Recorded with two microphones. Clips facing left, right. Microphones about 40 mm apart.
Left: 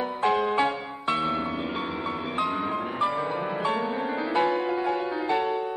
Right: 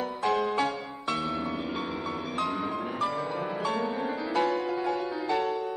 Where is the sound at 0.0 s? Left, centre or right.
Left.